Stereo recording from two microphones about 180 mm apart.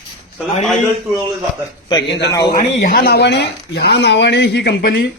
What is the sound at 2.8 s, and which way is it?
Speech, 60° left (ahead or behind).